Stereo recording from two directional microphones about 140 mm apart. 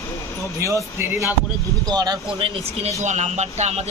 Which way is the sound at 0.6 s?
20° right (ahead or behind).